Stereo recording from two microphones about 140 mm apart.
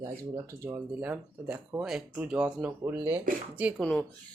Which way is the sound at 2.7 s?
15° right (ahead or behind).